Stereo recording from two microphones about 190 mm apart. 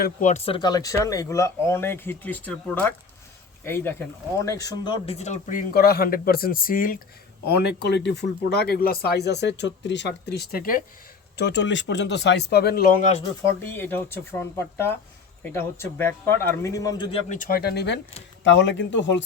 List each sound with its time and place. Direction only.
0.0 s speech: 40° left (ahead or behind); by 5.1 s 25° left (ahead or behind)
5.1 s speech: 35° left (ahead or behind)
7.4 s speech: 60° left (ahead or behind)
11.3 s speech: 65° left (ahead or behind); by 13.2 s 40° left (ahead or behind)
13.6 s speech: 10° left (ahead or behind); by 17.3 s 30° left (ahead or behind)
17.3 s speech: 50° left (ahead or behind); by 19.2 s 70° left (ahead or behind)